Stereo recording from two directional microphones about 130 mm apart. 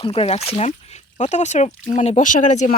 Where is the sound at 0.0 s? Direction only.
45° left (ahead or behind).